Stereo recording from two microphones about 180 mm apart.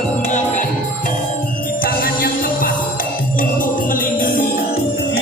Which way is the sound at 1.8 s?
55° left (ahead or behind).